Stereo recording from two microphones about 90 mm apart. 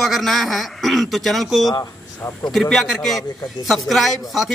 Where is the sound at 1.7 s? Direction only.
35° left (ahead or behind).